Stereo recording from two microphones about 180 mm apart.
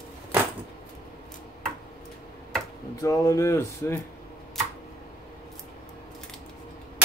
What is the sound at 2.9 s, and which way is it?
Speech, 20° left (ahead or behind).